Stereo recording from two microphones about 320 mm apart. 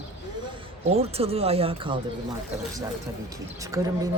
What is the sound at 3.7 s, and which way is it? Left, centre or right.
Speech, centre.